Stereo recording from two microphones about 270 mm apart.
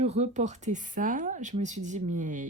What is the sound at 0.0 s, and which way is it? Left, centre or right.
Speech, right.